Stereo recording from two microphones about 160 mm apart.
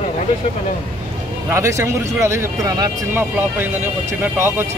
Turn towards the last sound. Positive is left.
turn(degrees=-15)  # may be behind; listen again after turning